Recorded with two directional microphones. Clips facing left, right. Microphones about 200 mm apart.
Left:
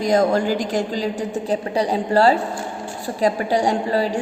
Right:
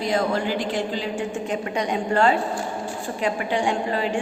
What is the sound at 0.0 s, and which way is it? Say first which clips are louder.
A woman's voice: left 5 dB; 45° left (ahead or behind).